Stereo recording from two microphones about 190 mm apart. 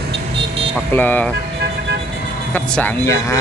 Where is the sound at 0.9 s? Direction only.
10° left (ahead or behind).